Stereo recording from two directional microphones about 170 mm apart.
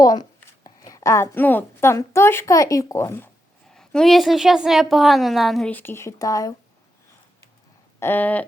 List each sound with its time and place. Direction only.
0.0 s a woman's voice: 25° left (ahead or behind)
3.7 s a woman's voice: 5° left (ahead or behind); by 6.5 s 20° left (ahead or behind)
7.9 s a woman's voice: 10° left (ahead or behind)